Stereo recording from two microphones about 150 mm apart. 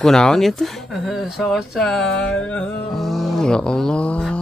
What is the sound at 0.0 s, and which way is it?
Speech, 5° left (ahead or behind).